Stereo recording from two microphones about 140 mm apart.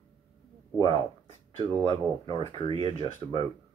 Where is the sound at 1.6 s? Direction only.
35° right (ahead or behind).